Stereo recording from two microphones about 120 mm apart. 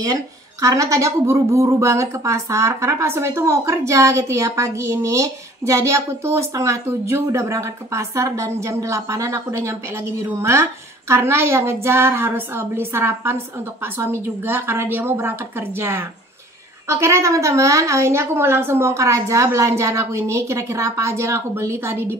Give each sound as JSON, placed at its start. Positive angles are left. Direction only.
{"t": 0.0, "sound": "speech", "side_deg": -30}